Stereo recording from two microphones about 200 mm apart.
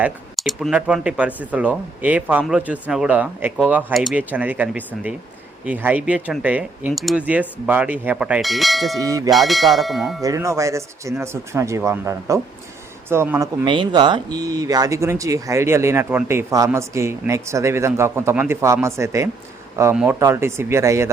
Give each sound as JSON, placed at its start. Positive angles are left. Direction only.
{"t": 0.0, "sound": "speech", "side_deg": 0}
{"t": 9.0, "sound": "speech", "side_deg": -15}
{"t": 9.3, "sound": "speech", "side_deg": 0}
{"t": 10.2, "sound": "speech", "side_deg": -15}
{"t": 13.7, "sound": "speech", "side_deg": -25}